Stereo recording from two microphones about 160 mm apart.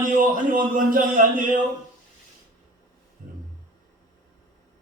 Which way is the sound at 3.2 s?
55° right (ahead or behind).